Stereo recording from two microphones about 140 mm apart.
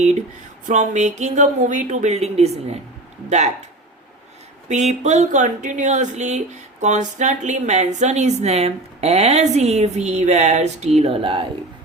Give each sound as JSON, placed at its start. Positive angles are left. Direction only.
{"t": 0.7, "sound": "speech", "side_deg": -60}
{"t": 4.7, "sound": "speech", "side_deg": -55}